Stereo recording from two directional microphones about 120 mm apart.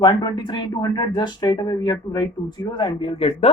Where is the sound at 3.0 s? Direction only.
50° left (ahead or behind).